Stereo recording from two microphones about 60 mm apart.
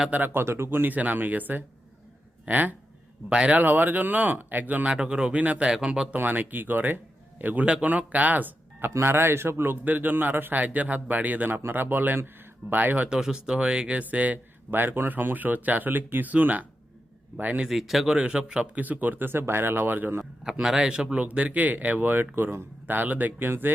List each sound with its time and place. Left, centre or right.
0.1 s speech: right
0.4 s a man's voice: right
3.7 s a man's voice: right
4.9 s a man's voice: centre
5.7 s speech: centre
6.1 s a man's voice: right
8.9 s a man's voice: right
9.8 s a man's voice: right
13.1 s a man's voice: centre; by 17.7 s right
17.7 s speech: centre
18.1 s speech: right
20.4 s speech: centre
21.2 s a man's voice: right